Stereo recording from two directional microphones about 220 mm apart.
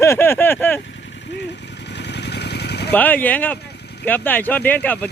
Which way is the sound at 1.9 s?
50° left (ahead or behind).